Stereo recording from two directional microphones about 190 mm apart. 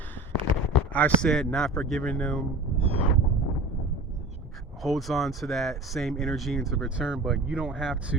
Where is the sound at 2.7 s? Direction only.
30° right (ahead or behind).